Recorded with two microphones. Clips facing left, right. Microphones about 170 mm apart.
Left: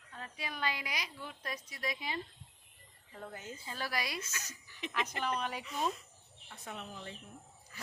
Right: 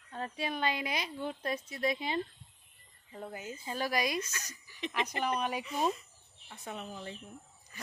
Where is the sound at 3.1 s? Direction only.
15° right (ahead or behind).